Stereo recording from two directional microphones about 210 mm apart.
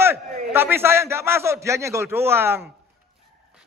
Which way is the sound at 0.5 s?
10° right (ahead or behind).